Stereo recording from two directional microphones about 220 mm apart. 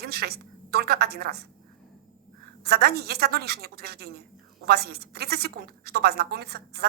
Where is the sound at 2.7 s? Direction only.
45° right (ahead or behind).